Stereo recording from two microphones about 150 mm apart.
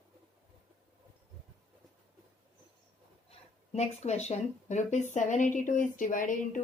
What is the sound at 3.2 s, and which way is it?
Speech, 45° left (ahead or behind).